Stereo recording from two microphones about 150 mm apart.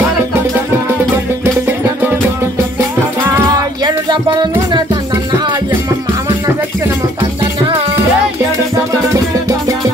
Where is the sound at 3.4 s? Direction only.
30° right (ahead or behind).